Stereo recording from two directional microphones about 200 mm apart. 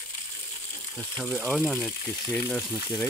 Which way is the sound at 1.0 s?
5° left (ahead or behind).